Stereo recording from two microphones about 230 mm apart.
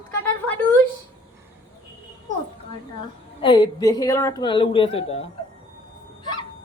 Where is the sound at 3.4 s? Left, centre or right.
Left.